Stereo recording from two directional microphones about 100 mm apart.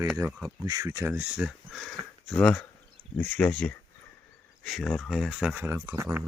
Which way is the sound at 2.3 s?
10° left (ahead or behind).